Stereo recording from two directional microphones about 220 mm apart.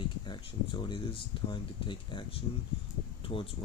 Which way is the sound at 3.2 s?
25° left (ahead or behind).